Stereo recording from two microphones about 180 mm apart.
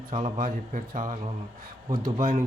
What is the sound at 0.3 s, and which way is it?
Speech, 45° right (ahead or behind).